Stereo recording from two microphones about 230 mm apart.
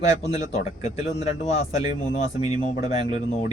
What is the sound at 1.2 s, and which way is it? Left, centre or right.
Speech, left.